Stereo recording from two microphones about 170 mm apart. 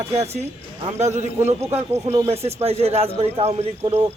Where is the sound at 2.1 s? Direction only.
35° right (ahead or behind).